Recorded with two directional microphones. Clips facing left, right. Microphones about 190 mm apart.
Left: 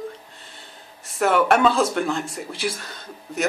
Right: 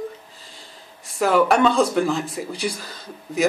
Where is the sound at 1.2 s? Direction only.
Centre (ahead or behind).